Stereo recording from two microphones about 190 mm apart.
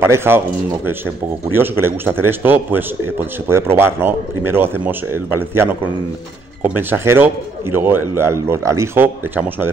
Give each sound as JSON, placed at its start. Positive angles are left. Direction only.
{"t": 0.0, "sound": "speech", "side_deg": -10}
{"t": 1.5, "sound": "speech", "side_deg": -10}